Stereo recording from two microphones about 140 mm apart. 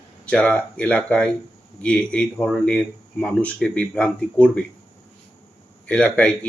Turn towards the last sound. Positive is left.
turn(degrees=10)  # may be behind; listen again after turning